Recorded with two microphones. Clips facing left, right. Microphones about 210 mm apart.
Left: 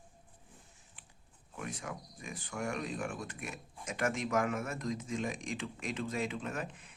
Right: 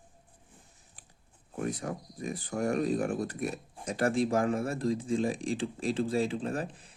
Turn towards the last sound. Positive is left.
turn(degrees=-35)  # may be behind; listen again after turning